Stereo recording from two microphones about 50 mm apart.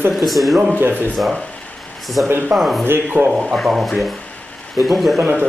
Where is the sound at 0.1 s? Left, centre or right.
Centre.